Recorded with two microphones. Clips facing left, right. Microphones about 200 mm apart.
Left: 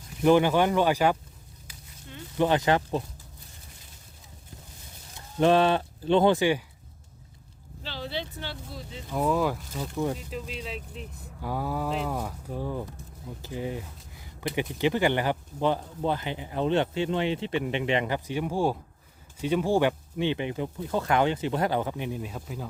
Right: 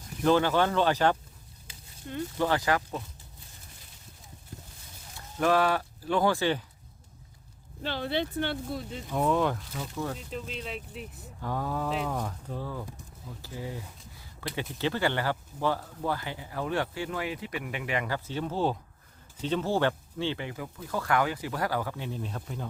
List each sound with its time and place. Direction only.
0.2 s speech: 15° left (ahead or behind)
2.1 s speech: 55° right (ahead or behind)
2.4 s speech: 20° left (ahead or behind)
5.1 s speech: 25° left (ahead or behind)
7.8 s speech: 55° right (ahead or behind)
9.1 s speech: 5° left (ahead or behind)
10.2 s speech: 5° left (ahead or behind)
11.4 s speech: 10° left (ahead or behind)